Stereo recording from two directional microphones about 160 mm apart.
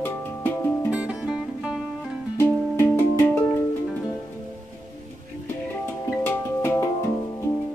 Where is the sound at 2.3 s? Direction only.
15° left (ahead or behind).